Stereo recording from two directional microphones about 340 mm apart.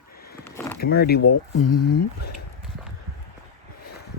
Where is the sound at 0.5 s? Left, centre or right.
Centre.